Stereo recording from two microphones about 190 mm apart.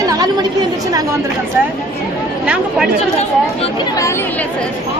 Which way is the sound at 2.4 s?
5° right (ahead or behind).